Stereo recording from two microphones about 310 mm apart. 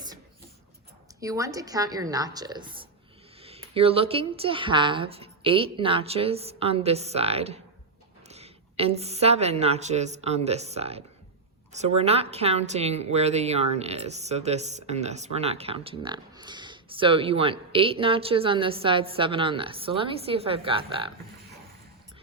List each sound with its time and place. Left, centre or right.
1.2 s a woman's voice: centre